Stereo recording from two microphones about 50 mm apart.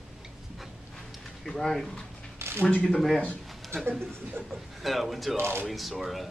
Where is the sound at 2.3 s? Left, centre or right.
Right.